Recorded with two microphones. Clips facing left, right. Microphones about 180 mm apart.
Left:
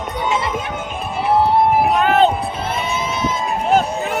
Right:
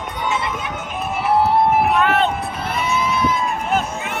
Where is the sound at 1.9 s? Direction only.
35° left (ahead or behind).